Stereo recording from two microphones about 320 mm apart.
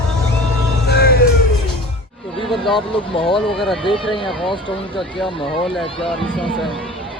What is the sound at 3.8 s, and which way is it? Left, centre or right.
Speech, centre.